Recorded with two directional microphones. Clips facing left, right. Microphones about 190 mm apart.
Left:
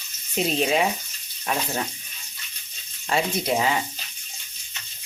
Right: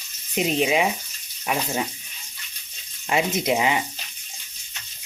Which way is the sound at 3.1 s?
20° right (ahead or behind).